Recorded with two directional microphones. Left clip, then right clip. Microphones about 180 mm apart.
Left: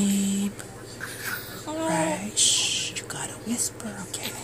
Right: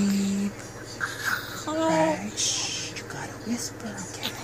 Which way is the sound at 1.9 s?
25° left (ahead or behind).